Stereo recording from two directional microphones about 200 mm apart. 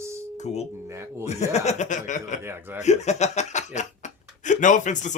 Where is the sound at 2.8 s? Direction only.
35° left (ahead or behind).